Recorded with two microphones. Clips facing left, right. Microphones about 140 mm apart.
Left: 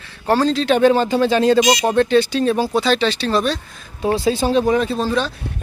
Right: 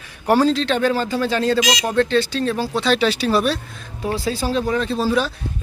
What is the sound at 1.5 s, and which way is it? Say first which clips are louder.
Speech: left 5 dB; 90° right.